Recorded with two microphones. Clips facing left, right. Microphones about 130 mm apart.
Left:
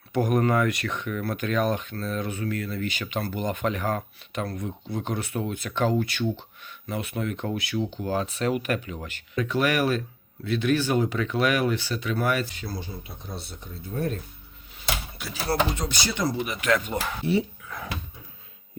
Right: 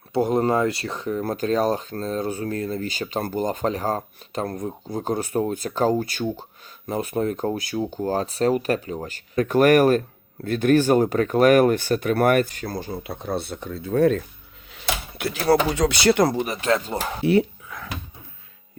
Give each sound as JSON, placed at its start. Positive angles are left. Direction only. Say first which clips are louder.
{"t": 0.1, "sound": "speech", "louder": "right 3 dB", "side_deg": -30}
{"t": 15.2, "sound": "speech", "louder": "right 7 dB", "side_deg": -65}
{"t": 16.3, "sound": "speech", "louder": "right 3 dB", "side_deg": -40}
{"t": 17.7, "sound": "a sound", "louder": "left 1 dB", "side_deg": 0}